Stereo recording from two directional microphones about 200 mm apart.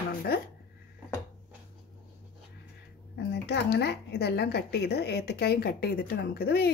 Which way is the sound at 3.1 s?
55° left (ahead or behind).